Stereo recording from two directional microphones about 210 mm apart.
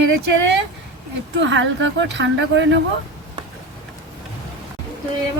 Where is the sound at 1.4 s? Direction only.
60° right (ahead or behind).